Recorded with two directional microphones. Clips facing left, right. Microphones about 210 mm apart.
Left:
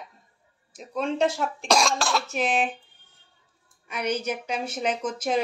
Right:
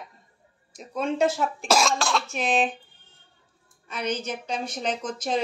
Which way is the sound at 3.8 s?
10° left (ahead or behind).